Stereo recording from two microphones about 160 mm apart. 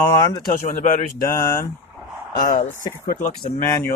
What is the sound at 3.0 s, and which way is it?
Speech, 65° left (ahead or behind).